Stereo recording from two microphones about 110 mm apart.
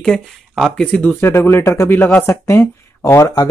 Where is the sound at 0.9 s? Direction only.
15° left (ahead or behind).